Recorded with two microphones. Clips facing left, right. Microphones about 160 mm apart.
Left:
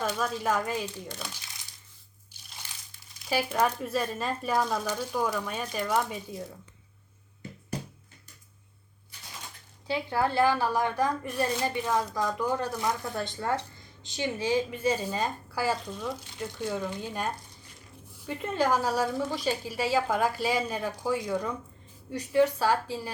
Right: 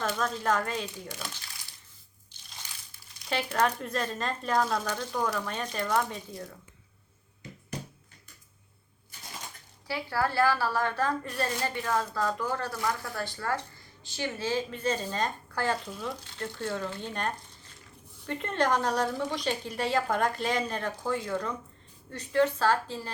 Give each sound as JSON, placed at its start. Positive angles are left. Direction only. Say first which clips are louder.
{"t": 0.2, "sound": "a woman's voice", "louder": "even", "side_deg": 10}
{"t": 3.2, "sound": "a woman's voice", "louder": "left 1 dB", "side_deg": 10}
{"t": 9.8, "sound": "a woman's voice", "louder": "left 2 dB", "side_deg": 20}
{"t": 16.2, "sound": "a woman's voice", "louder": "left 1 dB", "side_deg": 10}